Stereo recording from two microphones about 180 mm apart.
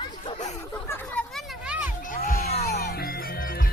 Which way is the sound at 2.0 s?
50° left (ahead or behind).